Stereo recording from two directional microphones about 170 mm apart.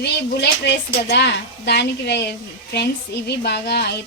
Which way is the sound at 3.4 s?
75° left (ahead or behind).